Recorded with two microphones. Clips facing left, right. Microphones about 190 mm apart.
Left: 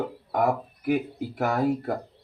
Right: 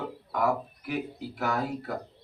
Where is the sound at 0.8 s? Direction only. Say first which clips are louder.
Left 10 dB; 50° left (ahead or behind).